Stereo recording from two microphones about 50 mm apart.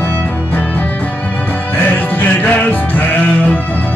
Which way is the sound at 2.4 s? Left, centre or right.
Left.